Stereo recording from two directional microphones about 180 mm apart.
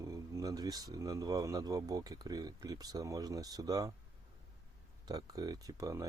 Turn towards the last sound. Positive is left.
turn(degrees=-20)  # may be behind; listen again after turning